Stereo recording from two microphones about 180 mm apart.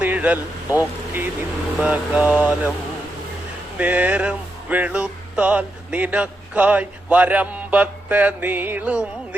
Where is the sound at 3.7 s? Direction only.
10° right (ahead or behind).